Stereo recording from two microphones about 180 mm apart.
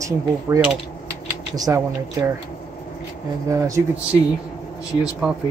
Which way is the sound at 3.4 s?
15° right (ahead or behind).